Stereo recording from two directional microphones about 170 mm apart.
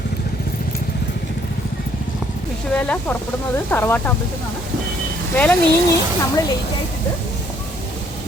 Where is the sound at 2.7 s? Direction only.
5° left (ahead or behind).